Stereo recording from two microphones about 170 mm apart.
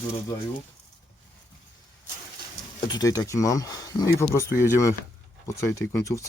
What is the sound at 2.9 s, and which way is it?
Speech, 20° left (ahead or behind).